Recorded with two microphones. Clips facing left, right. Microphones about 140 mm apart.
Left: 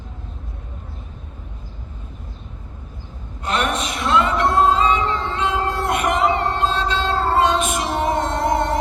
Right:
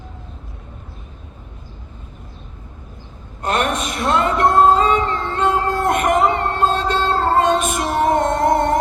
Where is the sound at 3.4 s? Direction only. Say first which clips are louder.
Right 2 dB; 50° right (ahead or behind).